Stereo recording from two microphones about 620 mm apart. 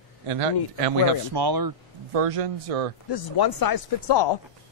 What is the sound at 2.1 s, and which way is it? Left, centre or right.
Speech, right.